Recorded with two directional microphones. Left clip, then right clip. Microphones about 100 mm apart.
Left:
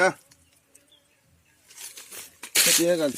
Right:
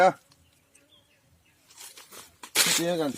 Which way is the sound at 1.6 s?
50° left (ahead or behind).